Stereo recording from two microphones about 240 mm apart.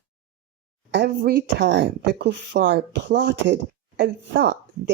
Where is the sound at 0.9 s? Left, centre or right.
Right.